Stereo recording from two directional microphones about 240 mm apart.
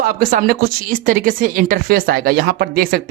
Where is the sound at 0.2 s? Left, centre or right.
Right.